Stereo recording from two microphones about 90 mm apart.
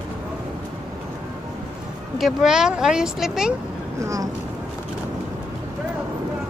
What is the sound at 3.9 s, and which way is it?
Speech, 35° right (ahead or behind).